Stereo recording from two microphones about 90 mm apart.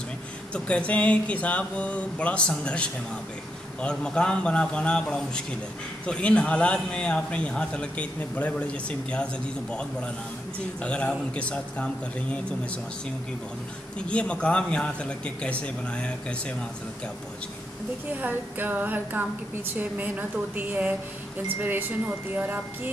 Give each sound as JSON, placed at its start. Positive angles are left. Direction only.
{"t": 0.5, "sound": "a man's voice", "side_deg": 15}
{"t": 13.9, "sound": "a man's voice", "side_deg": 10}
{"t": 18.1, "sound": "a woman's voice", "side_deg": -20}